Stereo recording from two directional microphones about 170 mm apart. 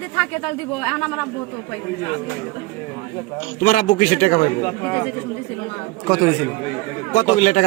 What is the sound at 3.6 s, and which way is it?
Speech, 55° left (ahead or behind).